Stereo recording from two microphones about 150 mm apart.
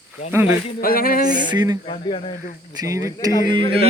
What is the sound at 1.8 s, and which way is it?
Speech, 40° left (ahead or behind).